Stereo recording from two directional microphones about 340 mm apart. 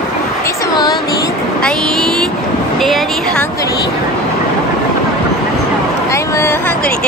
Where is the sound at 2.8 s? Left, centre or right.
Centre.